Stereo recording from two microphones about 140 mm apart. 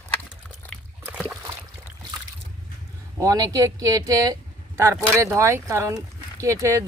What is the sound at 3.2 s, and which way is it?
Speech, 25° right (ahead or behind).